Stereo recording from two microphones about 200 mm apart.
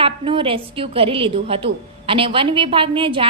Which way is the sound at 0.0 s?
25° right (ahead or behind).